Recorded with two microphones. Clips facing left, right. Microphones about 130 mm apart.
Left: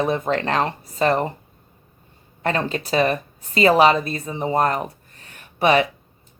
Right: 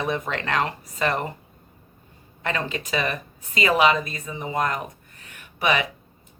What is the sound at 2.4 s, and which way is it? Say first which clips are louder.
A woman's voice: left 5 dB; 35° left (ahead or behind).